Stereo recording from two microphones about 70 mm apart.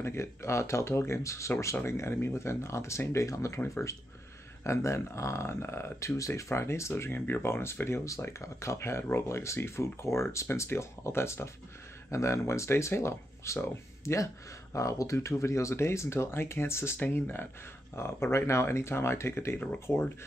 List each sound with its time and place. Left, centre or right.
0.0 s speech: left